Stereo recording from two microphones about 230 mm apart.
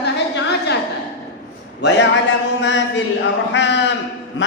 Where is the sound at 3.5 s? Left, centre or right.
Left.